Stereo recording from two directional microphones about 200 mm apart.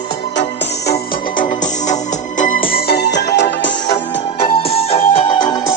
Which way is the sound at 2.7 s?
55° left (ahead or behind).